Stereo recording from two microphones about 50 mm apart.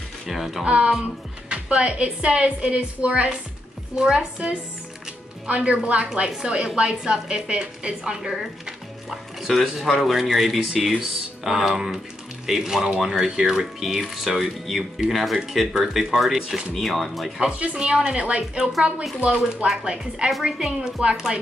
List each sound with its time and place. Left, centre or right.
0.3 s speech: centre
0.7 s a woman's voice: right
16.7 s speech: centre
17.4 s a woman's voice: centre